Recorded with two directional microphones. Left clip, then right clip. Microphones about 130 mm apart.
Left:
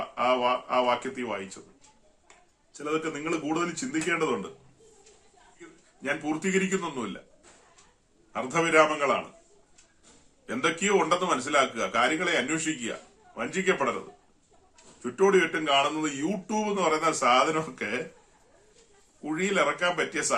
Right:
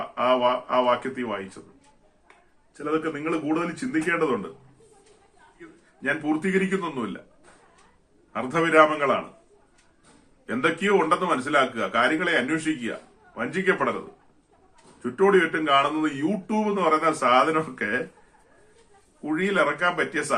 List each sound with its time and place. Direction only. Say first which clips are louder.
0.2 s speech: right 3 dB; 15° left (ahead or behind)
2.7 s a man's voice: right 3 dB; 25° left (ahead or behind)
5.5 s a man's voice: right 3 dB; 20° left (ahead or behind)
8.3 s a man's voice: right 3 dB; 20° left (ahead or behind)
10.4 s a man's voice: right 3 dB; 20° left (ahead or behind)
15.0 s a man's voice: right 3 dB; 15° left (ahead or behind)
19.2 s speech: right 3 dB; 20° left (ahead or behind)